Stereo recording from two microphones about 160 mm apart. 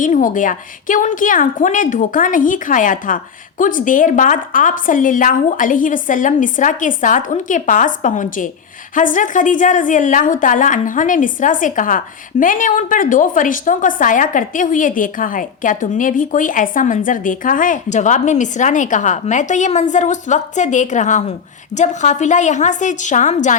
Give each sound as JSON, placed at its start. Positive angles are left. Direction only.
{"t": 0.0, "sound": "a woman's voice", "side_deg": 55}